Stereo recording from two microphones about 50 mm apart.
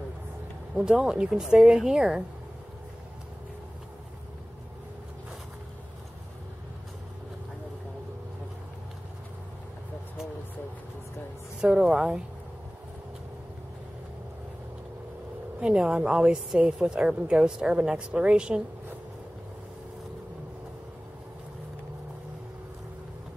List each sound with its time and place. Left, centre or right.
0.7 s a woman's voice: centre
11.6 s a woman's voice: right
15.6 s a woman's voice: centre